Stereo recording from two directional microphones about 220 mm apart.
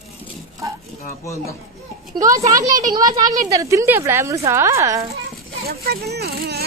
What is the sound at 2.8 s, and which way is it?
Speech, 15° right (ahead or behind).